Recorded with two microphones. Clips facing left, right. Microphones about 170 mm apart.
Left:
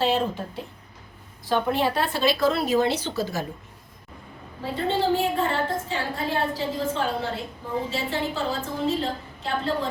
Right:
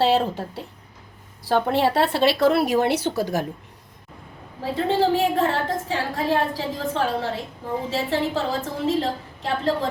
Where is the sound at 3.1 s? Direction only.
15° right (ahead or behind).